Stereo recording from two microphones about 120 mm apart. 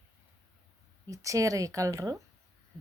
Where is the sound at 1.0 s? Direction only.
30° right (ahead or behind).